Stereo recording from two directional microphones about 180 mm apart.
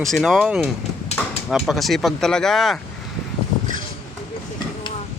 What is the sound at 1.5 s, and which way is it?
Speech, centre (ahead or behind).